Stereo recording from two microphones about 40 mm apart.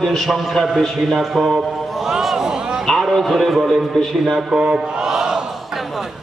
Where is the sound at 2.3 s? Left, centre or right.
Centre.